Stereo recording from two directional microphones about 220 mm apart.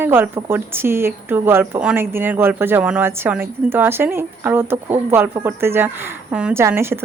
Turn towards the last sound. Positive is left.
turn(degrees=-10)  # may be behind; listen again after turning